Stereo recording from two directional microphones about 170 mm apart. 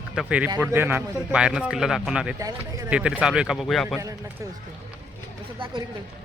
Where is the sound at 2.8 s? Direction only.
10° right (ahead or behind).